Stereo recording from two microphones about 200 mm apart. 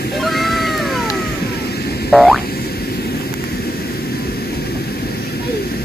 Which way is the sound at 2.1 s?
Centre (ahead or behind).